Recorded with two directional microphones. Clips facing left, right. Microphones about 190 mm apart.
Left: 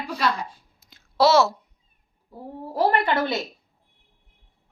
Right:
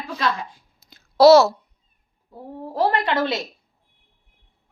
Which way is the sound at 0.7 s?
40° right (ahead or behind).